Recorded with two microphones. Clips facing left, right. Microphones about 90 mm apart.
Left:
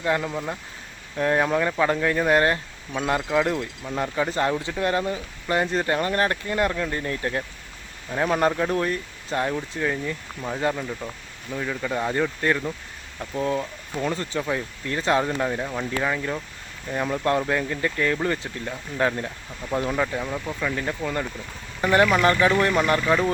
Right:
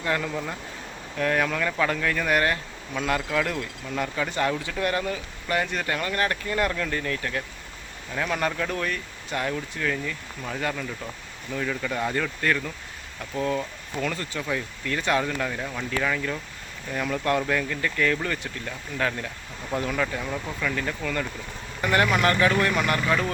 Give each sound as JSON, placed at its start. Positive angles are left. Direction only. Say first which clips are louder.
{"t": 0.0, "sound": "speech", "louder": "left 3 dB", "side_deg": 15}
{"t": 20.2, "sound": "speech", "louder": "left 2 dB", "side_deg": 5}
{"t": 20.6, "sound": "speech", "louder": "left 2 dB", "side_deg": 20}